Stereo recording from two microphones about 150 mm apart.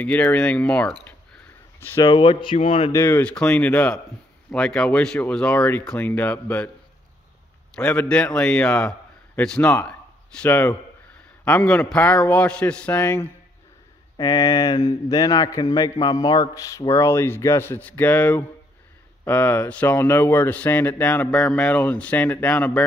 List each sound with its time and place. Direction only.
0.0 s speech: 10° left (ahead or behind)
2.0 s speech: 35° left (ahead or behind)
2.9 s speech: 15° left (ahead or behind)
7.7 s a man's voice: 10° left (ahead or behind)
14.1 s a man's voice: 25° left (ahead or behind); by 22.8 s 10° left (ahead or behind)